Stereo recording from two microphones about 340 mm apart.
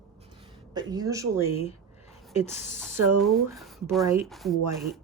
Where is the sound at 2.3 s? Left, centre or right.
Centre.